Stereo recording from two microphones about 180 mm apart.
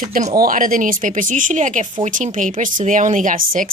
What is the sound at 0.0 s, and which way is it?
A woman's voice, 40° right (ahead or behind).